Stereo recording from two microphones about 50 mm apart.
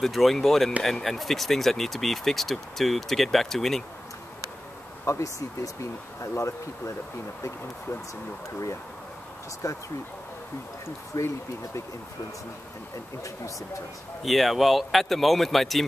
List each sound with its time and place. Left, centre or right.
0.0 s speech: centre
5.0 s speech: left
9.6 s speech: left
11.1 s speech: left
14.2 s speech: centre